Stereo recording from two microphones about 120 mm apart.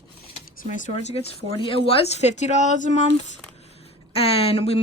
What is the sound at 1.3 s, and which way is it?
A woman's voice, 50° left (ahead or behind).